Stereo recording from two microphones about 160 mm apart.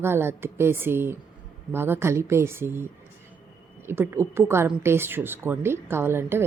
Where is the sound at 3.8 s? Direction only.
15° right (ahead or behind).